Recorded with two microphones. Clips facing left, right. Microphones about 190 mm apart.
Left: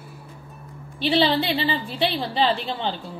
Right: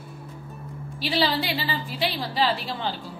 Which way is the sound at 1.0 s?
30° left (ahead or behind).